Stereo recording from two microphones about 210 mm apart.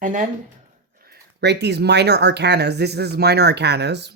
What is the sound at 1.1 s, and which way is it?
Speech, 55° right (ahead or behind).